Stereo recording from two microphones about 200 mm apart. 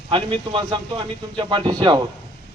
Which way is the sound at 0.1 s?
25° right (ahead or behind).